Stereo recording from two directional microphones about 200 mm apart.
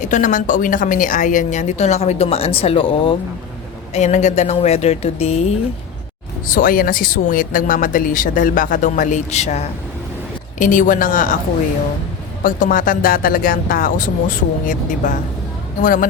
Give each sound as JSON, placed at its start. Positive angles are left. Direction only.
{"t": 0.0, "sound": "a woman's voice", "side_deg": 40}
{"t": 6.5, "sound": "a woman's voice", "side_deg": 45}
{"t": 12.4, "sound": "speech", "side_deg": 40}